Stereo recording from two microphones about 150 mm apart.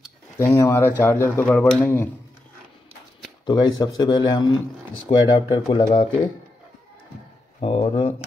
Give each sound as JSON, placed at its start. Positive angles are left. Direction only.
{"t": 0.4, "sound": "speech", "side_deg": 20}
{"t": 3.4, "sound": "speech", "side_deg": 30}
{"t": 7.6, "sound": "speech", "side_deg": 35}